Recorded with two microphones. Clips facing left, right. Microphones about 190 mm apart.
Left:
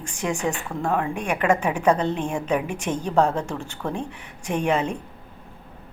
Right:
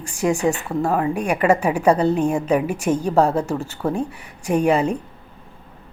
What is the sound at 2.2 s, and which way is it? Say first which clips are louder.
Speech: right 7 dB; 40° right (ahead or behind).